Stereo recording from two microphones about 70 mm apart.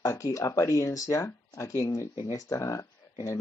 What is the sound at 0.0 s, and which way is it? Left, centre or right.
Speech, left.